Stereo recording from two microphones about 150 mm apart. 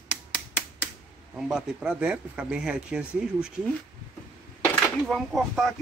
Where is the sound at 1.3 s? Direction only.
5° right (ahead or behind).